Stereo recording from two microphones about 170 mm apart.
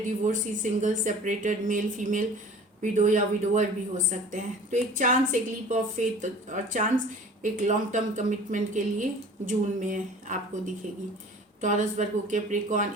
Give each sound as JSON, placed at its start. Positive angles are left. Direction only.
{"t": 0.3, "sound": "speech", "side_deg": -45}